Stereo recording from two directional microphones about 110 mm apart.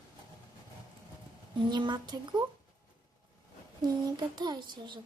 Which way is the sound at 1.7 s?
40° right (ahead or behind).